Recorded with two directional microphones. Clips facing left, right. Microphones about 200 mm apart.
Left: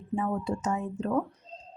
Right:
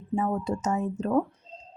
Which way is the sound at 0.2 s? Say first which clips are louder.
Right 2 dB; 40° right (ahead or behind).